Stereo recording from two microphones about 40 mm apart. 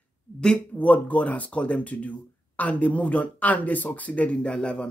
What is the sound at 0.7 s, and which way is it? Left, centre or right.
Speech, left.